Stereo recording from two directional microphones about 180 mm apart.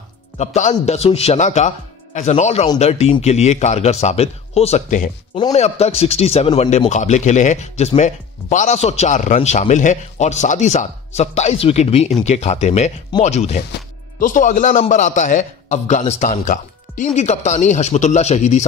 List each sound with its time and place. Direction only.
0.4 s a man's voice: 40° left (ahead or behind)